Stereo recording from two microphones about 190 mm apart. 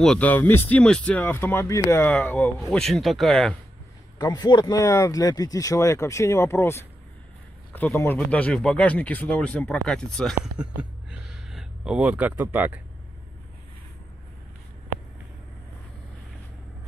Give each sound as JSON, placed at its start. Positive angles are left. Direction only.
{"t": 0.0, "sound": "speech", "side_deg": 5}
{"t": 4.2, "sound": "speech", "side_deg": 20}